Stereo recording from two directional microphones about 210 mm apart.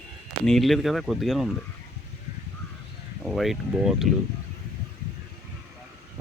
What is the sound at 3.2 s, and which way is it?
Speech, centre (ahead or behind).